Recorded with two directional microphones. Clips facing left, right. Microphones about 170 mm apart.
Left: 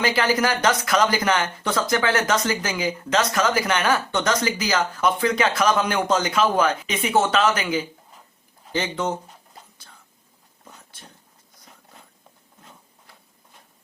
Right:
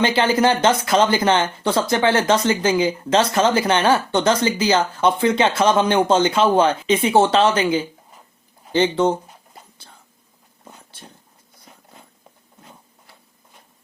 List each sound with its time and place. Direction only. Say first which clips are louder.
0.0 s speech: right 4 dB; 25° right (ahead or behind)